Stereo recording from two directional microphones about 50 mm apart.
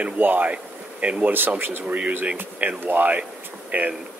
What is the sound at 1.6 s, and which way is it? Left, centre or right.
Speech, right.